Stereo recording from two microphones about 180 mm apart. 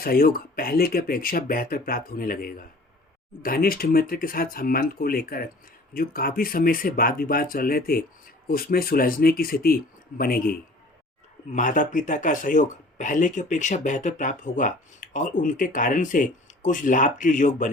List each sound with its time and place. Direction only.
0.0 s speech: 55° left (ahead or behind)